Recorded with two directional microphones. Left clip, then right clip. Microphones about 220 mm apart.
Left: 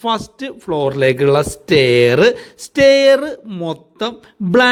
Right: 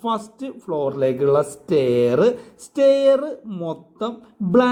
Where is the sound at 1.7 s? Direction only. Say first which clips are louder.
Left 7 dB; 25° left (ahead or behind).